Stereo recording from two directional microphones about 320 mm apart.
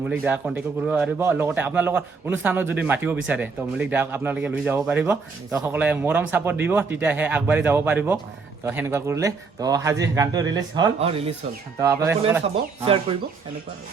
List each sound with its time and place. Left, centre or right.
0.1 s speech: centre